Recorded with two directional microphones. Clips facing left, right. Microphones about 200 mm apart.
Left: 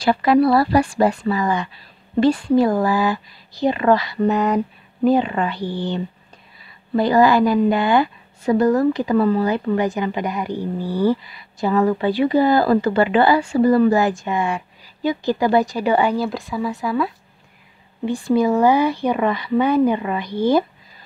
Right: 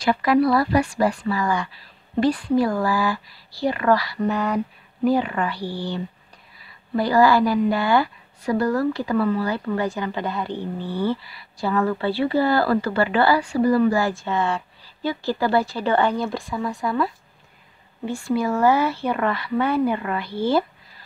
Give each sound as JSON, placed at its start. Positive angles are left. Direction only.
{"t": 0.0, "sound": "a woman's voice", "side_deg": 30}
{"t": 18.0, "sound": "a woman's voice", "side_deg": 15}